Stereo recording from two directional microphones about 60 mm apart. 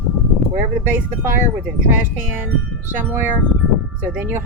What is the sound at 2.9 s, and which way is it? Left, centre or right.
Speech, right.